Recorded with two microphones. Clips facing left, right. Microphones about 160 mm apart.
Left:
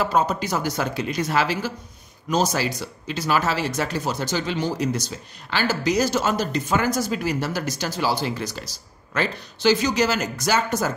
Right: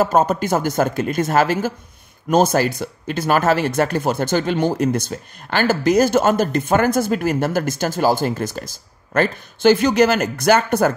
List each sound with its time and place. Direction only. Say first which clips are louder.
0.0 s speech: right 5 dB; 45° right (ahead or behind)